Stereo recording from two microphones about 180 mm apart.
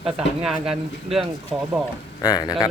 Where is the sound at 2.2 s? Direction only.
20° left (ahead or behind).